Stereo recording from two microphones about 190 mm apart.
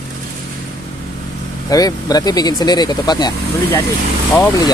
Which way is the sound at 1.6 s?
20° left (ahead or behind).